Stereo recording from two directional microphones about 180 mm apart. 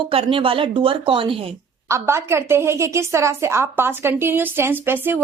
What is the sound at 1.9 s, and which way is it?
A woman's voice, 15° right (ahead or behind).